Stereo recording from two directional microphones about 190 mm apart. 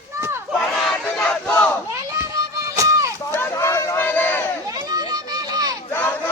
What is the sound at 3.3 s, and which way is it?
Crowd, 15° left (ahead or behind).